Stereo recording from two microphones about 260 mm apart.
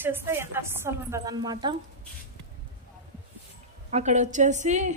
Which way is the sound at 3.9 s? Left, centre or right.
Right.